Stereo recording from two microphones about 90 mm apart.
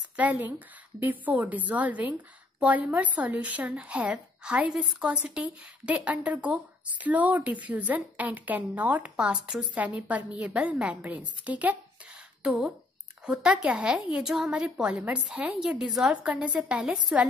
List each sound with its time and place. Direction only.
0.1 s a woman's voice: 15° right (ahead or behind)